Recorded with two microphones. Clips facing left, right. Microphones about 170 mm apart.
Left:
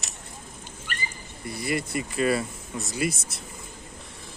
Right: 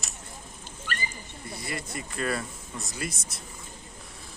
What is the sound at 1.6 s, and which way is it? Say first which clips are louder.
Speech: left 9 dB; 10° left (ahead or behind).